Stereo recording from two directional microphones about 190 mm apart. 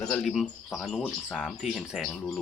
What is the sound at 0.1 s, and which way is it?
Speech, centre (ahead or behind).